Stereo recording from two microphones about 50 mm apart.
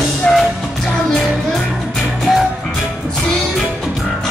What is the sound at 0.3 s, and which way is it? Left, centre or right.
Music, left.